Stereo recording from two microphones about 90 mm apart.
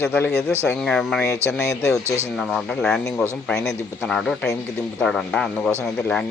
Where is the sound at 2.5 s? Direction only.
5° left (ahead or behind).